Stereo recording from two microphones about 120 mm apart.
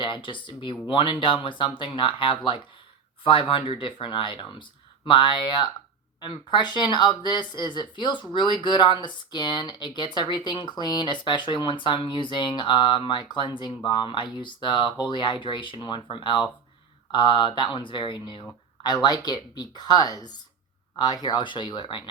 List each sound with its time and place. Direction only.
0.0 s speech: 45° left (ahead or behind)